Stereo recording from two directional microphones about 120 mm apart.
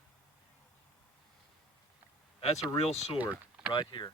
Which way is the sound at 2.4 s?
55° left (ahead or behind).